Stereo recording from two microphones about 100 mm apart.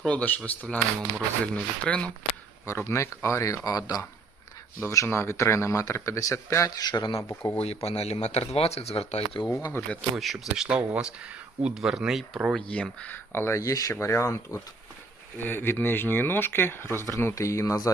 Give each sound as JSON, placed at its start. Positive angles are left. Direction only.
{"t": 0.0, "sound": "speech", "side_deg": 15}
{"t": 2.6, "sound": "speech", "side_deg": 30}
{"t": 4.8, "sound": "speech", "side_deg": 30}
{"t": 7.2, "sound": "speech", "side_deg": 30}
{"t": 7.6, "sound": "speech", "side_deg": 90}
{"t": 9.8, "sound": "speech", "side_deg": 30}
{"t": 10.2, "sound": "speech", "side_deg": 0}
{"t": 12.5, "sound": "speech", "side_deg": 10}
{"t": 13.1, "sound": "speech", "side_deg": 25}